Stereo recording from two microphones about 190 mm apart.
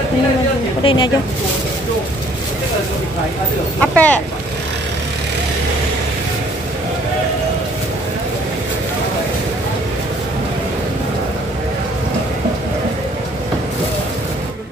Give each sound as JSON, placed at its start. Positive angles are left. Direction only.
{"t": 0.8, "sound": "speech", "side_deg": 25}
{"t": 3.8, "sound": "speech", "side_deg": 5}